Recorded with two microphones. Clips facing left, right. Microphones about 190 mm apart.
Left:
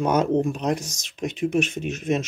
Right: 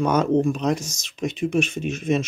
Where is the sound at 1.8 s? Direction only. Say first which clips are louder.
Right 2 dB; 55° left (ahead or behind).